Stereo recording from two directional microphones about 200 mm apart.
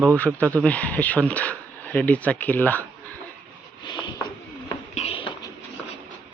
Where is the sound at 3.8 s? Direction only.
20° left (ahead or behind).